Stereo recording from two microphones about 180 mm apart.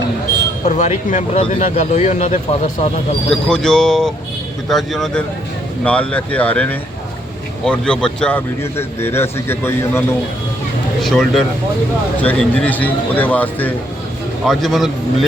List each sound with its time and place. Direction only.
0.6 s speech: 40° left (ahead or behind)
3.2 s speech: 5° left (ahead or behind)
11.0 s speech: centre (ahead or behind)